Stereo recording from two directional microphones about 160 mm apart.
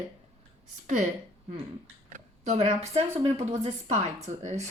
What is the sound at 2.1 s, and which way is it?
A woman's voice, 45° right (ahead or behind).